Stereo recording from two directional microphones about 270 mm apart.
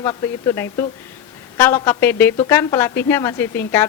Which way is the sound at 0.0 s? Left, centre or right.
Centre.